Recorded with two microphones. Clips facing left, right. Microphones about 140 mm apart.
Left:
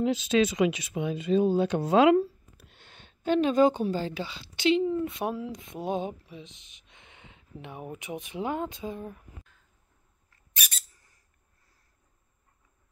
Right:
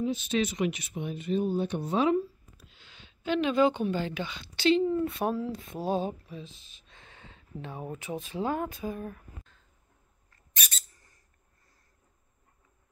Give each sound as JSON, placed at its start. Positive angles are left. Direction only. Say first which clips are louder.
{"t": 0.0, "sound": "speech", "louder": "left 4 dB", "side_deg": 90}
{"t": 10.5, "sound": "squeak", "louder": "left 1 dB", "side_deg": 10}